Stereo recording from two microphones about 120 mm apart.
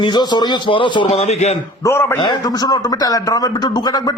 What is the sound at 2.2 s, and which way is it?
A man's voice, 35° left (ahead or behind).